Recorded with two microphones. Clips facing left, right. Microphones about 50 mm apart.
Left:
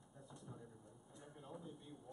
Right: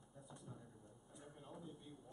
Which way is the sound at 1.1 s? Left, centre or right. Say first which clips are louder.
Left 2 dB; centre.